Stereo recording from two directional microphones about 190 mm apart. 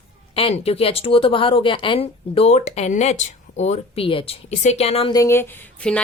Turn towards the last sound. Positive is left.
turn(degrees=10)  # may be behind; listen again after turning